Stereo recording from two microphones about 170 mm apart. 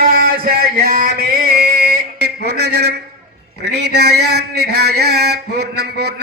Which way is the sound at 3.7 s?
80° right.